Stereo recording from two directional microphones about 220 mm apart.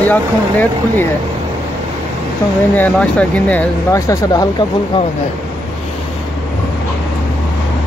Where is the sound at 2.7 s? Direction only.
5° left (ahead or behind).